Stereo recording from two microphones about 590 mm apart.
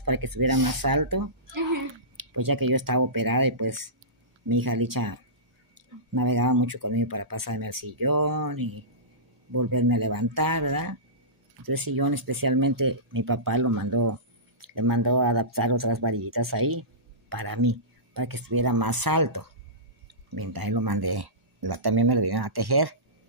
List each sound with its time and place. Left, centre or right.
0.0 s a child's voice: right